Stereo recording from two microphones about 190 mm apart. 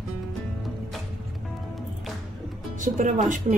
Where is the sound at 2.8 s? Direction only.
40° right (ahead or behind).